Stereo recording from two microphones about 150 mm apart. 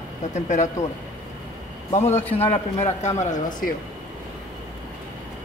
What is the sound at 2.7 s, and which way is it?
Speech, 50° left (ahead or behind).